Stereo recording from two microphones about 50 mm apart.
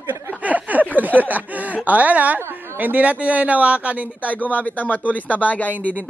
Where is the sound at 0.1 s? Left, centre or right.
Right.